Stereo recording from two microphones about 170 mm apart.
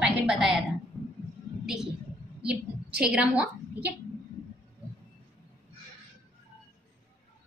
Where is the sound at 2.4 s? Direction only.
5° right (ahead or behind).